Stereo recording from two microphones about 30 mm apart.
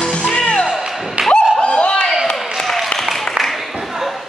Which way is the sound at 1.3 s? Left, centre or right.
Left.